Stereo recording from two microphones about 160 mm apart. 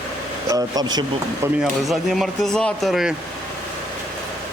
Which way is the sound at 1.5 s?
5° right (ahead or behind).